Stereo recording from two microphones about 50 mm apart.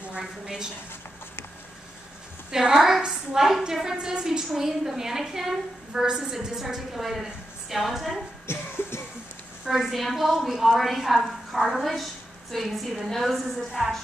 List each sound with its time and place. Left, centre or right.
0.2 s a woman's voice: centre
2.5 s a woman's voice: centre
8.5 s music: left
9.7 s a woman's voice: centre